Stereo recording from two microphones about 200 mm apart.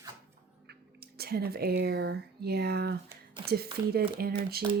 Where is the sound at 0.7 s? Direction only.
50° right (ahead or behind).